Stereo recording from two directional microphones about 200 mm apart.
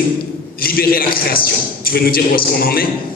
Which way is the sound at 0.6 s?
45° left (ahead or behind).